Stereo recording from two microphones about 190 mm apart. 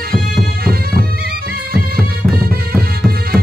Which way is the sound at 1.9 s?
50° right (ahead or behind).